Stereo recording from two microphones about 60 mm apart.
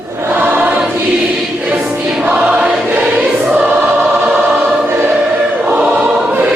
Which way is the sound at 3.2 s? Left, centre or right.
Centre.